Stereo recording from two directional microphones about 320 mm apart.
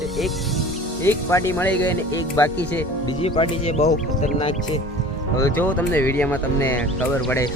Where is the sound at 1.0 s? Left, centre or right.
Centre.